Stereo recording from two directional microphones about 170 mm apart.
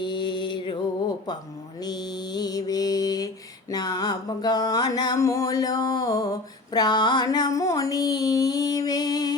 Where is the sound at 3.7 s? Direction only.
25° left (ahead or behind).